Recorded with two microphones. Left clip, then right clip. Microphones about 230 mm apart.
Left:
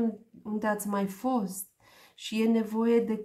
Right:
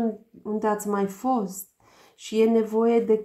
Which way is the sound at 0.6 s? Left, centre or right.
Left.